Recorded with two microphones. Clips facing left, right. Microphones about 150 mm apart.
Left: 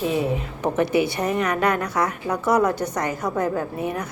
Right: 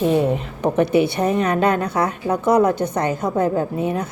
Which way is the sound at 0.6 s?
25° right (ahead or behind).